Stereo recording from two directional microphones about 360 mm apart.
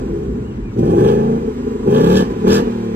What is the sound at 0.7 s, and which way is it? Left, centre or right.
Vehicle, right.